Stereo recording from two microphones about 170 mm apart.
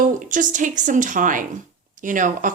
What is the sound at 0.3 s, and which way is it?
Speech, 50° right (ahead or behind).